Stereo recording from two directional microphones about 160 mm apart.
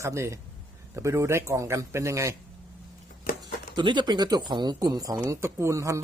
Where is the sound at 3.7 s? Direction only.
30° right (ahead or behind).